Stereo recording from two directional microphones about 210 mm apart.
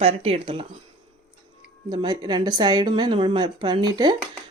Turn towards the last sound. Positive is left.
turn(degrees=-20)  # may be behind; listen again after turning